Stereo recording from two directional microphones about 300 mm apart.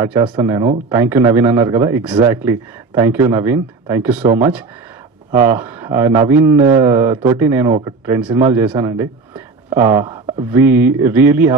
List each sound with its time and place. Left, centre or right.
0.0 s a man's voice: centre
5.3 s speech: right
5.6 s a man's voice: centre
8.5 s a sound: centre
9.8 s a man's voice: centre